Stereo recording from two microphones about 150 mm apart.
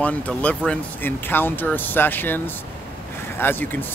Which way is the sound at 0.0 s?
10° left (ahead or behind).